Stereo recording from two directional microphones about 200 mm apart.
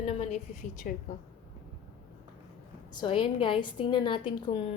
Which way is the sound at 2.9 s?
25° left (ahead or behind).